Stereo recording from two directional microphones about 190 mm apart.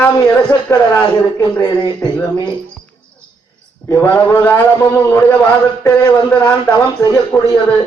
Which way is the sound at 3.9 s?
10° left (ahead or behind).